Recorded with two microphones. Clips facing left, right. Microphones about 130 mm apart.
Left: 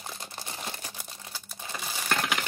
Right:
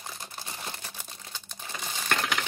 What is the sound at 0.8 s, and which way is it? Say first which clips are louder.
Crumpling: left 1 dB; 10° left (ahead or behind).